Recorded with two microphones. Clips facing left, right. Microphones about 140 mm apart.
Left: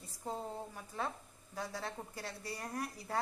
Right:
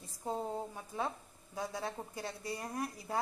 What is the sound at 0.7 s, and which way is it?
A woman's voice, 20° right (ahead or behind).